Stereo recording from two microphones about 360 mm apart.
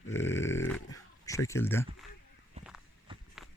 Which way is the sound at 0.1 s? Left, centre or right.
Centre.